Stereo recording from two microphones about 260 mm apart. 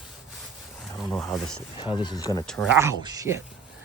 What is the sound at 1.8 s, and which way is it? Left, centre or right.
Speech, centre.